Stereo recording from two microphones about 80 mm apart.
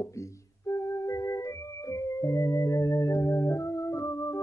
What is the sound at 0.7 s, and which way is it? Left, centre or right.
Music, left.